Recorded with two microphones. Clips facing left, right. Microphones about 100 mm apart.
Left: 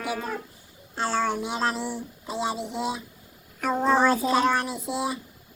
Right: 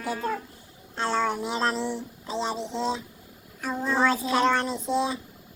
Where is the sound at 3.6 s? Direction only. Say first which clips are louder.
Left 6 dB; 70° left (ahead or behind).